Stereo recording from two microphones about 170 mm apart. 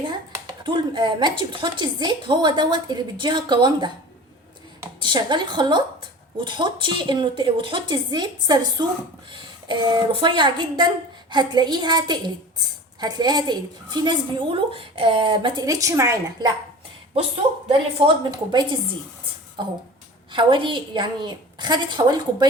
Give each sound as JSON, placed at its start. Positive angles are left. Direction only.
{"t": 0.0, "sound": "speech", "side_deg": -30}
{"t": 4.9, "sound": "a woman's voice", "side_deg": -25}
{"t": 17.7, "sound": "speech", "side_deg": -35}
{"t": 19.6, "sound": "a woman's voice", "side_deg": -30}